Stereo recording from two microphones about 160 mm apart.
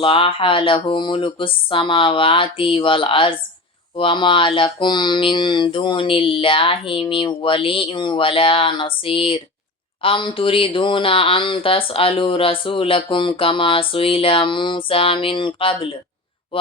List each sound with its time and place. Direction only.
0.0 s speech: 35° left (ahead or behind)